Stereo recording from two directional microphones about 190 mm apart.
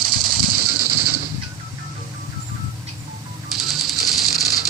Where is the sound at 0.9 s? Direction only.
45° left (ahead or behind).